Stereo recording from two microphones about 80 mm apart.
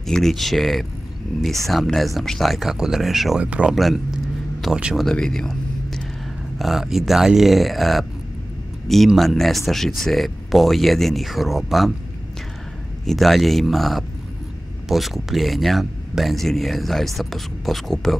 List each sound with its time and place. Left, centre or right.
0.0 s speech: centre
3.4 s speech: centre
3.7 s speech: centre
13.0 s speech: centre